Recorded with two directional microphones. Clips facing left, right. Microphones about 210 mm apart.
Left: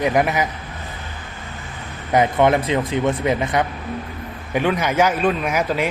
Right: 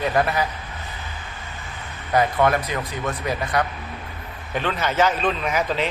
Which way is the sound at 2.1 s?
20° left (ahead or behind).